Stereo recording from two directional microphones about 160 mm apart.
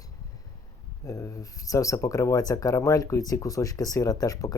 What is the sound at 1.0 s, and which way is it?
Speech, 20° left (ahead or behind).